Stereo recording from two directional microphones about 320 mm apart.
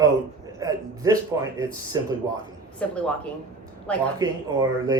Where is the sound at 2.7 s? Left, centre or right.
Centre.